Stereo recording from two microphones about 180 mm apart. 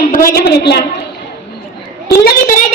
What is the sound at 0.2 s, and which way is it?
Speech, 60° left (ahead or behind).